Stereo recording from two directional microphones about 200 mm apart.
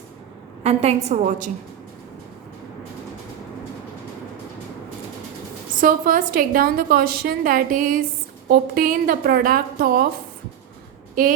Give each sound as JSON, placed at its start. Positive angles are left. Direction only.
{"t": 0.6, "sound": "a woman's voice", "side_deg": -30}
{"t": 5.8, "sound": "a woman's voice", "side_deg": -45}
{"t": 11.2, "sound": "a woman's voice", "side_deg": -45}